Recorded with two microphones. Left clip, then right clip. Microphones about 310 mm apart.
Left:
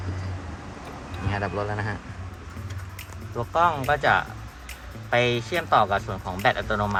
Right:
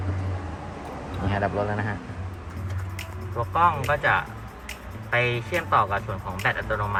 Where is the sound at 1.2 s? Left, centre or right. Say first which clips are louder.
Right 2 dB; centre.